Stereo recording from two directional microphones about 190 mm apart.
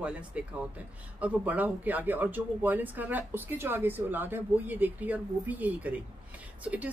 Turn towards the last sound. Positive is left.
turn(degrees=-10)  # may be behind; listen again after turning